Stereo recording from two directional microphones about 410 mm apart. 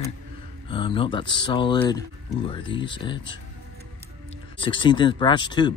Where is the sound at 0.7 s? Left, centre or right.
Centre.